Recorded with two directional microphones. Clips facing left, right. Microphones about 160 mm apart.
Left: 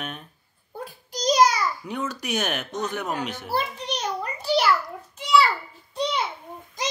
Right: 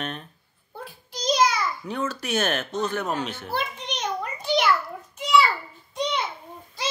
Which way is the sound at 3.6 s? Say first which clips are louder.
Left 2 dB; 35° left (ahead or behind).